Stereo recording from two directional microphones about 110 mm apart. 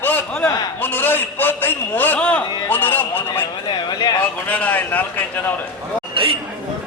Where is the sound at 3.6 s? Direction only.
40° left (ahead or behind).